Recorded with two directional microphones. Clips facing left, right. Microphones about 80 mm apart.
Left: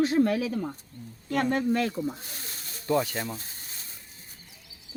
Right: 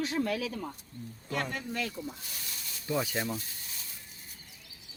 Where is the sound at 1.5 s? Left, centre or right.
Left.